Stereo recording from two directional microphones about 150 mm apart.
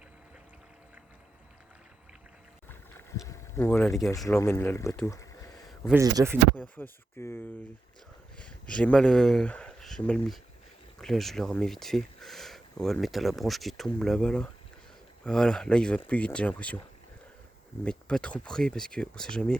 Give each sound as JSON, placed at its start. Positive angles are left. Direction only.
{"t": 2.6, "sound": "boat", "side_deg": 15}
{"t": 3.8, "sound": "speech", "side_deg": 0}
{"t": 4.3, "sound": "speech", "side_deg": 20}
{"t": 5.0, "sound": "a sound", "side_deg": 20}
{"t": 5.9, "sound": "speech", "side_deg": -20}
{"t": 6.6, "sound": "speech", "side_deg": 15}
{"t": 17.8, "sound": "speech", "side_deg": 5}